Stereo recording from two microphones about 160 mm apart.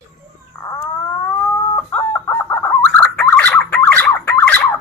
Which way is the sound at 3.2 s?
10° left (ahead or behind).